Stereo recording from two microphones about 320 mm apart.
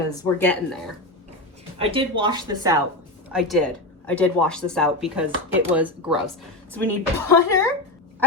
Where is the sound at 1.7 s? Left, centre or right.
Centre.